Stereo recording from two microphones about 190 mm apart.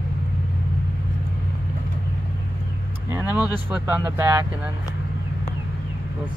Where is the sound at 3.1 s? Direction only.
10° right (ahead or behind).